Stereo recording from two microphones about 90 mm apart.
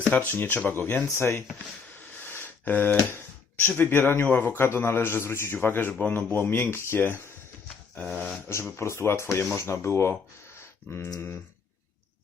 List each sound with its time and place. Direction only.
0.3 s a man's voice: 20° left (ahead or behind)
1.0 s speech: 30° left (ahead or behind)
2.1 s a sound: 25° left (ahead or behind)
3.7 s a man's voice: 25° left (ahead or behind)
8.4 s a man's voice: 30° left (ahead or behind)